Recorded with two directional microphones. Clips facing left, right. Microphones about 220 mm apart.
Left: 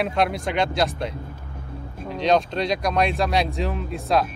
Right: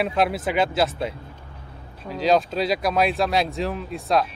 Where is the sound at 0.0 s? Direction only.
Centre (ahead or behind).